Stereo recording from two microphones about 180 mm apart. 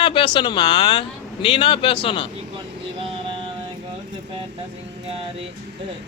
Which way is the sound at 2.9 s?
30° right (ahead or behind).